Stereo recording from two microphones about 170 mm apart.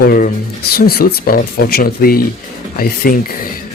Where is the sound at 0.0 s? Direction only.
60° left (ahead or behind).